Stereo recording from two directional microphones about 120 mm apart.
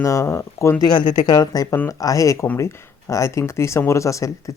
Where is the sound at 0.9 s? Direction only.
35° left (ahead or behind).